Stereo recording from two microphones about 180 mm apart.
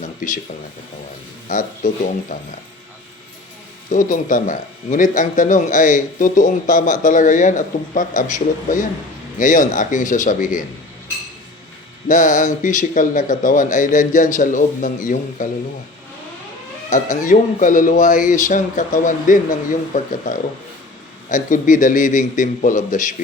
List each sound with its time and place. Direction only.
1.5 s a man's voice: 45° left (ahead or behind)
3.9 s a man's voice: 45° left (ahead or behind)
12.0 s a man's voice: 45° left (ahead or behind)
16.9 s a man's voice: 45° left (ahead or behind)